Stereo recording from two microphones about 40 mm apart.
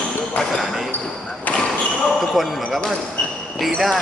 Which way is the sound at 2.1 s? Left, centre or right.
Centre.